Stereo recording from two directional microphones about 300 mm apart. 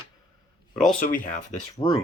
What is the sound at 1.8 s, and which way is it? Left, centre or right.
Speech, centre.